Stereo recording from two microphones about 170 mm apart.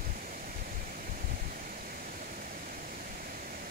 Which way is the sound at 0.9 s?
55° right (ahead or behind).